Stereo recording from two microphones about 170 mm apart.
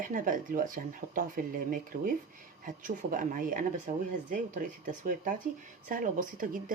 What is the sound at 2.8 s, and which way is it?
Speech, 55° right (ahead or behind).